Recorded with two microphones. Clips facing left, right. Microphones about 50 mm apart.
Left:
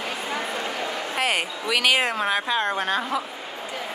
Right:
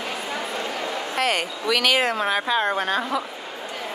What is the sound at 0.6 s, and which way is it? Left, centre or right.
Speech, centre.